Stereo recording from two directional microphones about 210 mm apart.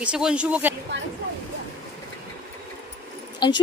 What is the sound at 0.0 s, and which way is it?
Speech, 5° right (ahead or behind).